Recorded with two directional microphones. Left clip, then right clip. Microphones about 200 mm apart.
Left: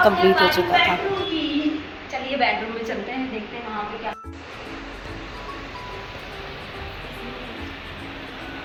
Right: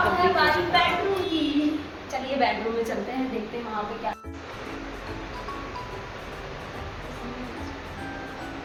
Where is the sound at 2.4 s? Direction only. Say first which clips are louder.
Left 3 dB; 10° right (ahead or behind).